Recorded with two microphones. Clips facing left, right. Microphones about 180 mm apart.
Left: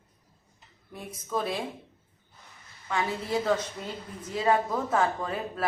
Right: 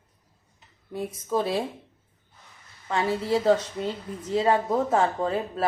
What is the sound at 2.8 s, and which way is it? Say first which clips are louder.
A woman's voice: right 5 dB; 30° right (ahead or behind).